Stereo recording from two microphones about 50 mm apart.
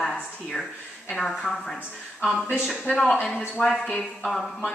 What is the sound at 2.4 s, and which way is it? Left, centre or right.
Speech, left.